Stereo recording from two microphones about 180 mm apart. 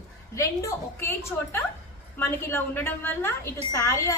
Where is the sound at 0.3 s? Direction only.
15° left (ahead or behind).